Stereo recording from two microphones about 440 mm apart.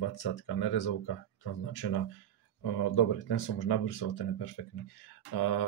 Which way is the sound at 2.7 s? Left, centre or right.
Left.